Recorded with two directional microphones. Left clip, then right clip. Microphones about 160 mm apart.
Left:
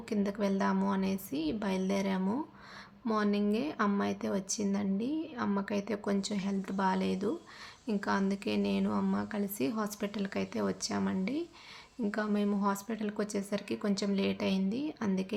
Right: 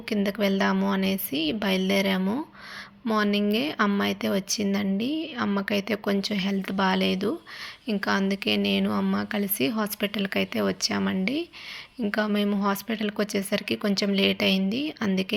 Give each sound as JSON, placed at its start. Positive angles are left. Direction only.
{"t": 0.1, "sound": "speech", "side_deg": -20}